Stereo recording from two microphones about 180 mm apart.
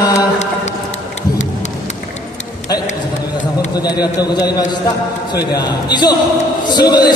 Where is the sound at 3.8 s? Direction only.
20° left (ahead or behind).